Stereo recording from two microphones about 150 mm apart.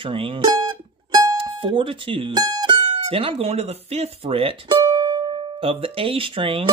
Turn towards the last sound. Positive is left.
turn(degrees=-35)  # may be behind; listen again after turning